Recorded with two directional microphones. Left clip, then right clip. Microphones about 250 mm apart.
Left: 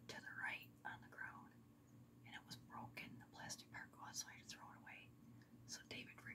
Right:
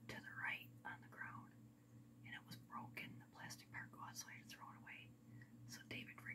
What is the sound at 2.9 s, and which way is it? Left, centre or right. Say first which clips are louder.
Whispering: right 1 dB; centre.